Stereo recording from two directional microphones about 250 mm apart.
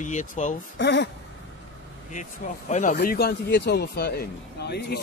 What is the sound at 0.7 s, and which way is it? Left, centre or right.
Speech, left.